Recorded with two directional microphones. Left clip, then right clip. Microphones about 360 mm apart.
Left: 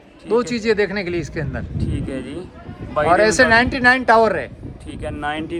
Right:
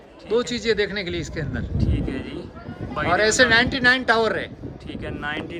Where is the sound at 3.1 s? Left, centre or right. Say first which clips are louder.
Left 3 dB; centre.